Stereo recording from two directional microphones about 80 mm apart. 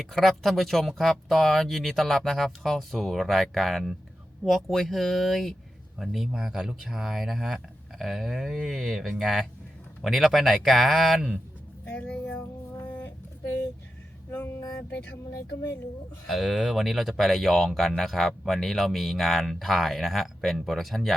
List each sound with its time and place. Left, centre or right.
0.0 s speech: centre
11.9 s music: centre
12.8 s a sound: left
14.3 s a sound: left
15.3 s speech: left
16.2 s speech: centre